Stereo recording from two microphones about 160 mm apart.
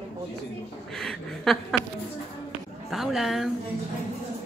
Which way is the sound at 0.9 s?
5° left (ahead or behind).